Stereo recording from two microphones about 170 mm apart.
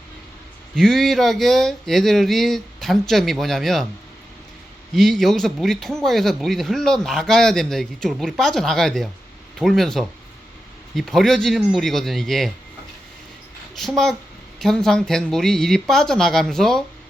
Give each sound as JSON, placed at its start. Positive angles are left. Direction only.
{"t": 0.8, "sound": "a man's voice", "side_deg": 0}
{"t": 4.9, "sound": "a man's voice", "side_deg": 0}
{"t": 13.7, "sound": "a man's voice", "side_deg": 0}